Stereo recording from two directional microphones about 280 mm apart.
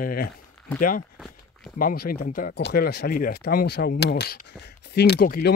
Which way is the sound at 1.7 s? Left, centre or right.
Left.